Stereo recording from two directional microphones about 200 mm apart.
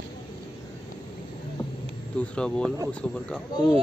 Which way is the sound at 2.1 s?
5° left (ahead or behind).